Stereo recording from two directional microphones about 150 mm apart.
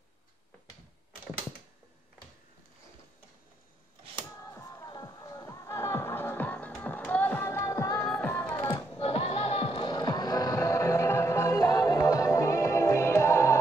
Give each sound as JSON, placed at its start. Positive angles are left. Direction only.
{"t": 4.4, "sound": "music", "side_deg": 20}
{"t": 8.0, "sound": "music", "side_deg": 5}
{"t": 8.3, "sound": "music", "side_deg": 20}
{"t": 9.0, "sound": "music", "side_deg": 40}